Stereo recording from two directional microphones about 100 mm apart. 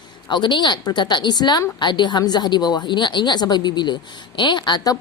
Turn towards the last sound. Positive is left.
turn(degrees=40)  # may be behind; listen again after turning